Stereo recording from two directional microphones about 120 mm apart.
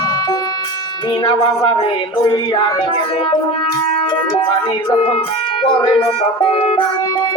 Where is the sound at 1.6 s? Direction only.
45° left (ahead or behind).